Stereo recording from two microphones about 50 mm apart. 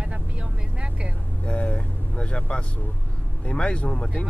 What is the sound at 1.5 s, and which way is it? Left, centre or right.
Speech, left.